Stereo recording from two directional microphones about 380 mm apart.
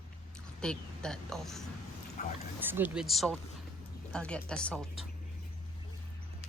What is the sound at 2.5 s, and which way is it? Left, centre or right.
Speech, centre.